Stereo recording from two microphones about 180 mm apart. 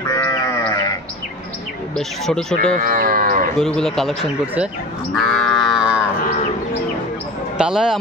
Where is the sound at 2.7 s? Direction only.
50° right (ahead or behind).